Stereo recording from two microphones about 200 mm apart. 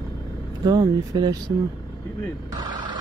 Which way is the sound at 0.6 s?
20° right (ahead or behind).